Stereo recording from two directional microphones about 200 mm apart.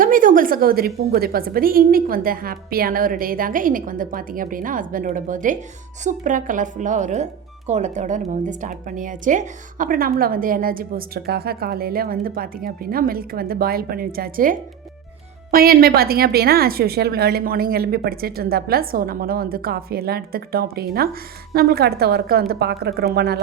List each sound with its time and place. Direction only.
0.0 s a woman's voice: 45° right (ahead or behind)